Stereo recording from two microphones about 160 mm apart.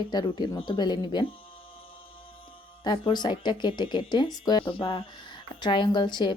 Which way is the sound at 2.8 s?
30° left (ahead or behind).